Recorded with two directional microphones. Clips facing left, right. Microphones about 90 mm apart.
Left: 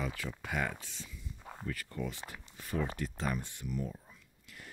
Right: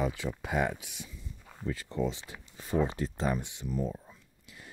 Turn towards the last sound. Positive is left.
turn(degrees=-25)  # may be behind; listen again after turning